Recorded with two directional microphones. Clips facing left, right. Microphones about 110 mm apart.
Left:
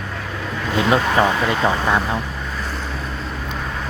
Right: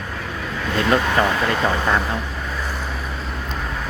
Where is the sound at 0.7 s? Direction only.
15° left (ahead or behind).